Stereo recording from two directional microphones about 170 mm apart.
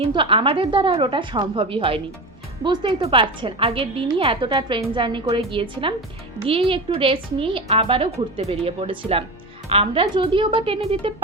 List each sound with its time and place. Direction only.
0.0 s a woman's voice: 30° right (ahead or behind)